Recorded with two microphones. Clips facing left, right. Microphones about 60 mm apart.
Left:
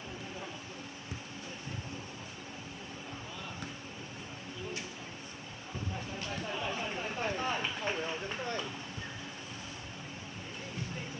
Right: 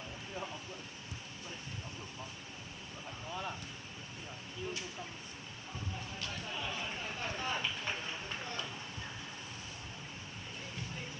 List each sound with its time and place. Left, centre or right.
6.1 s chatter: left